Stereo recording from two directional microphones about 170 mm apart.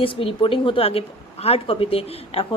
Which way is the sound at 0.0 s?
30° left (ahead or behind).